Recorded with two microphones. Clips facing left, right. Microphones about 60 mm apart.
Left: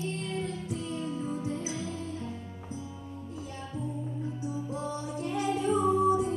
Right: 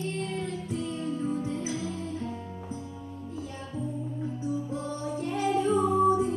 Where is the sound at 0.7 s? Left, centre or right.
Right.